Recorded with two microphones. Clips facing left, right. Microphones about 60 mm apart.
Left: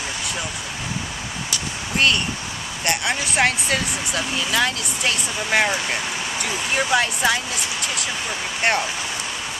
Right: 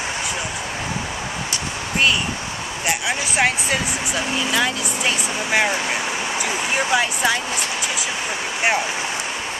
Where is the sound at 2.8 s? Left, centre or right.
Centre; by 6.7 s right.